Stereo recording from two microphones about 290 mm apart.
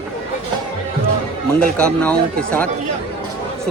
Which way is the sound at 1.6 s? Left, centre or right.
Centre.